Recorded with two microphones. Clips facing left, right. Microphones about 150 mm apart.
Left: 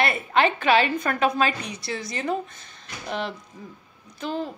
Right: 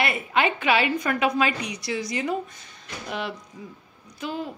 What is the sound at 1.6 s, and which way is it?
Speech, 15° right (ahead or behind).